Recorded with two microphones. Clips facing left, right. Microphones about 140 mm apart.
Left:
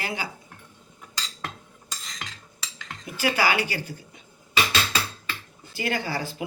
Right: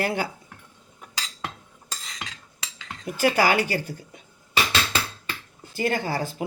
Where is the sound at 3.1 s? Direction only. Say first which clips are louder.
Right 3 dB; 50° right (ahead or behind).